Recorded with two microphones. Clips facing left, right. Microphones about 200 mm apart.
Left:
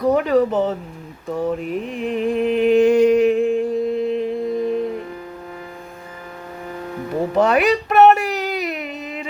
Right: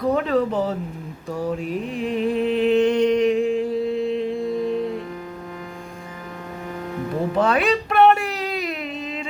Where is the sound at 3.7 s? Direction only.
45° left (ahead or behind).